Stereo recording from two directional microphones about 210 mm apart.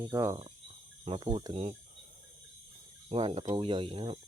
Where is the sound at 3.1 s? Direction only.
25° right (ahead or behind).